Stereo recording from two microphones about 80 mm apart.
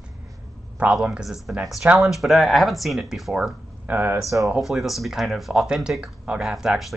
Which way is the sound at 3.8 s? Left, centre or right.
Right.